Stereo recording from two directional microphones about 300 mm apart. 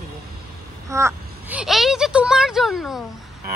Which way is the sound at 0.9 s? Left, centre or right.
Centre.